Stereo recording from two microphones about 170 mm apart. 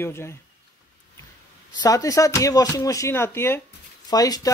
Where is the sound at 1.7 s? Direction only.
20° left (ahead or behind).